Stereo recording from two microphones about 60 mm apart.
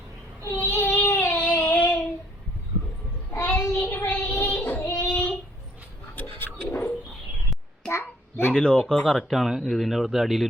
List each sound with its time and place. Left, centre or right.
0.6 s a sound: left
1.5 s child singing: left
3.5 s child singing: left
6.4 s dog: left
7.9 s a sound: left
8.5 s speech: centre
9.1 s speech: centre